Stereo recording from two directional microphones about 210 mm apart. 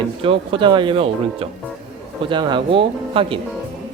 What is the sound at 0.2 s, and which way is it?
Speech, 25° right (ahead or behind).